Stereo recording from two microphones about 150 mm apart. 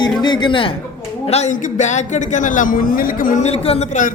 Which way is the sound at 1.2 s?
45° left (ahead or behind).